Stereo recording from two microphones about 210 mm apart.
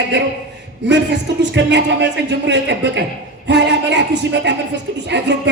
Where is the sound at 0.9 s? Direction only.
55° right (ahead or behind).